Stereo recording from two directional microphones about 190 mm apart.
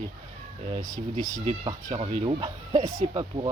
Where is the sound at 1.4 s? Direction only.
25° right (ahead or behind).